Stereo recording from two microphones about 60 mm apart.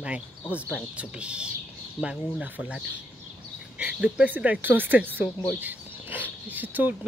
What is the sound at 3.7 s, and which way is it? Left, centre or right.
Speech, right.